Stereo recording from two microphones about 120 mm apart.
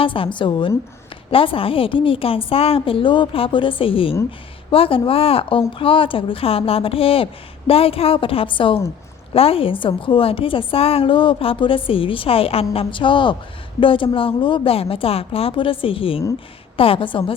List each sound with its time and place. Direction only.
0.0 s a woman's voice: 45° left (ahead or behind)